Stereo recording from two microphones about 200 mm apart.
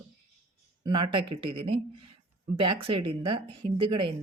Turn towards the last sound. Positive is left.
turn(degrees=-25)  # may be behind; listen again after turning